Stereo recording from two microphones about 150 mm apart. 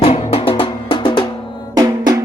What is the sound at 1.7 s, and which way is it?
Drum, 25° right (ahead or behind).